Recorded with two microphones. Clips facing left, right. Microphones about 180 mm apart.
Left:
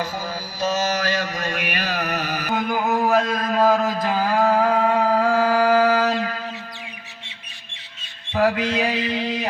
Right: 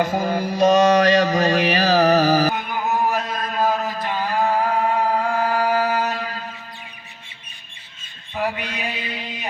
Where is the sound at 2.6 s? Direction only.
90° left.